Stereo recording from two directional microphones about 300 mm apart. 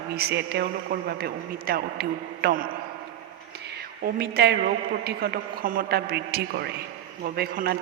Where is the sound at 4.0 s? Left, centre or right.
Right.